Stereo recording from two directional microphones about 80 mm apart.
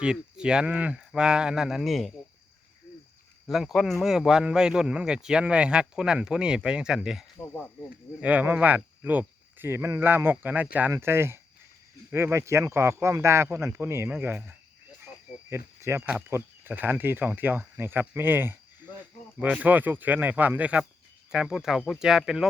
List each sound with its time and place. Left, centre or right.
0.0 s speech: centre
3.4 s speech: centre
8.2 s speech: right
10.9 s speech: right
15.4 s speech: right; by 22.4 s centre